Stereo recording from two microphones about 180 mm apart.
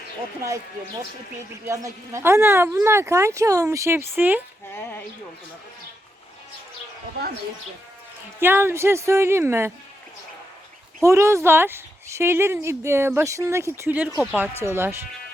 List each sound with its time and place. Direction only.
1.6 s speech: 15° right (ahead or behind)
4.7 s speech: 10° left (ahead or behind)
8.4 s speech: 10° right (ahead or behind)
11.0 s speech: 15° right (ahead or behind)